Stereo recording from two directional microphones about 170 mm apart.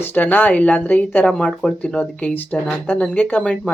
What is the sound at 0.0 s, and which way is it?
Speech, 10° left (ahead or behind).